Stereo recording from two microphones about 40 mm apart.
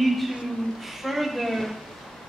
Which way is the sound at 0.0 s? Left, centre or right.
Centre.